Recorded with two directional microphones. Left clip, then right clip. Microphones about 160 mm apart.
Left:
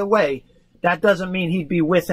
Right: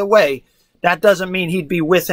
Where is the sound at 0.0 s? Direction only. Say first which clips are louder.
Right 5 dB; 15° right (ahead or behind).